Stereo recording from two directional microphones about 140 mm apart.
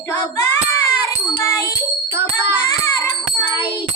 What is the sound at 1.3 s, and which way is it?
Music, 25° left (ahead or behind).